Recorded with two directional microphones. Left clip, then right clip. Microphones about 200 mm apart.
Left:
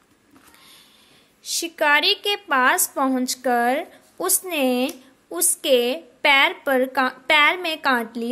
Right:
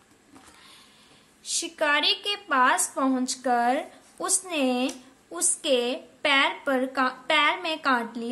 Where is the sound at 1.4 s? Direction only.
35° left (ahead or behind).